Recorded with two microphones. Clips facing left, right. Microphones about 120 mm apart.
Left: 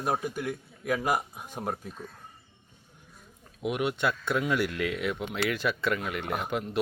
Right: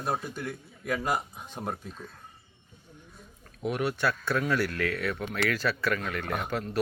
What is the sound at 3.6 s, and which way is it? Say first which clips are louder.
Speech: even; 20° left (ahead or behind).